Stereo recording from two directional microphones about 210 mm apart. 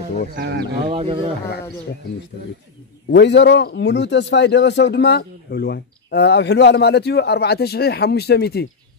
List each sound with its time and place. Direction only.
0.4 s speech: 55° right (ahead or behind)
0.9 s speech: 25° right (ahead or behind)
3.1 s a man's voice: 55° left (ahead or behind)